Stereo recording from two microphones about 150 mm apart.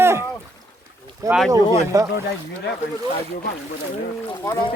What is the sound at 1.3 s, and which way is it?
Speech, centre (ahead or behind).